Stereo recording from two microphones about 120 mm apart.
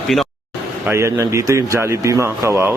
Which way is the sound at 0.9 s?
25° right (ahead or behind).